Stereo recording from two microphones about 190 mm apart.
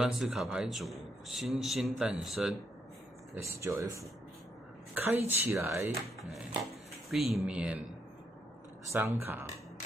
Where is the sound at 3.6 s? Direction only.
15° right (ahead or behind).